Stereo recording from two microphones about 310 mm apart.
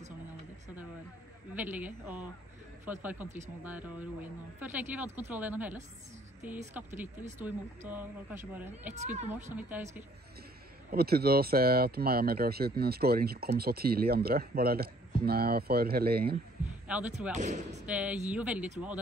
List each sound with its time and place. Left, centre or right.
1.5 s speech: centre
8.9 s speech: right
9.3 s speech: centre
10.9 s speech: right
16.8 s speech: centre
17.3 s speech: right
17.8 s speech: centre